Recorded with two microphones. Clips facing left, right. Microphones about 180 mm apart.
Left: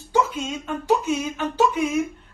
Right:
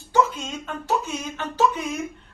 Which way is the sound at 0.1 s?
10° left (ahead or behind).